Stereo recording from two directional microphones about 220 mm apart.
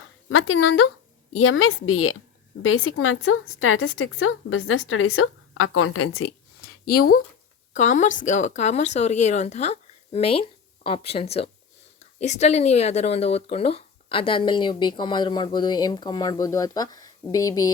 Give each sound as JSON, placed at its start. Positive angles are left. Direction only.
{"t": 0.3, "sound": "a woman's voice", "side_deg": 65}
{"t": 6.6, "sound": "a sound", "side_deg": 45}
{"t": 7.7, "sound": "speech", "side_deg": 35}